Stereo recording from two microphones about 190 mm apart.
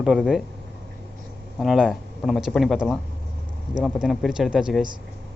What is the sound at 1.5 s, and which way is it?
Speech, centre (ahead or behind).